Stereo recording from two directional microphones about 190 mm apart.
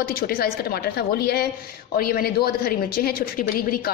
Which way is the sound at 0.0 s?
50° left (ahead or behind).